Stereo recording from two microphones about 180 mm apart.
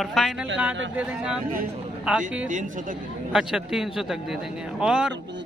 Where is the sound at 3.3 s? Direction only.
5° right (ahead or behind).